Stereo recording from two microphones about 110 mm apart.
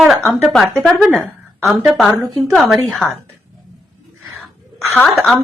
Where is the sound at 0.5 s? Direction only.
Centre (ahead or behind).